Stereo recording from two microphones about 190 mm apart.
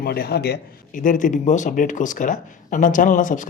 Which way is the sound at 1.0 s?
45° left (ahead or behind).